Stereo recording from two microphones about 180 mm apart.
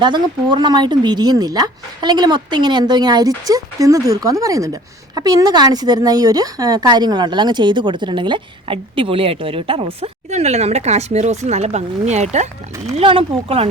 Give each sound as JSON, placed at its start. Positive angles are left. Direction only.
{"t": 0.0, "sound": "speech", "side_deg": -25}